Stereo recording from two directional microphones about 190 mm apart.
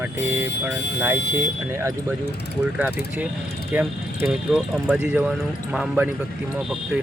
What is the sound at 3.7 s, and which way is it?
Speech, 10° right (ahead or behind).